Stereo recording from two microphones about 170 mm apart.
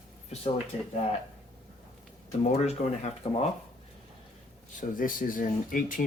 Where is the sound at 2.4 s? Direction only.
40° left (ahead or behind).